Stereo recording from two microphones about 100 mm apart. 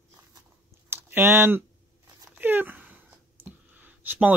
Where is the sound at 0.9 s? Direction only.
20° right (ahead or behind).